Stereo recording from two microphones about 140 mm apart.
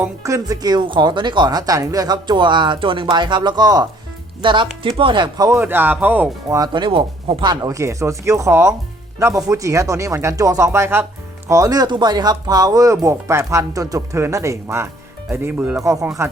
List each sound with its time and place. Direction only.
0.2 s speech: 25° right (ahead or behind)
5.5 s speech: 15° right (ahead or behind)
6.5 s speech: 30° right (ahead or behind)
7.5 s speech: 25° right (ahead or behind)